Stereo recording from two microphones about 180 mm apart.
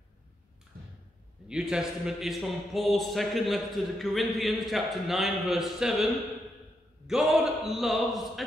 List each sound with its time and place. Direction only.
1.5 s a man's voice: 5° right (ahead or behind)
7.1 s a man's voice: centre (ahead or behind)